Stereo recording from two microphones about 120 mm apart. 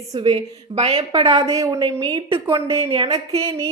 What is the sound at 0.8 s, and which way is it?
Speech, 60° right (ahead or behind).